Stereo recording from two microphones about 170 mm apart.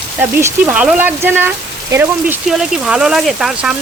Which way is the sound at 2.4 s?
Centre (ahead or behind).